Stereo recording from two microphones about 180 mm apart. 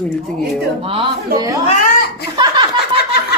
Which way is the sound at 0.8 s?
30° right (ahead or behind).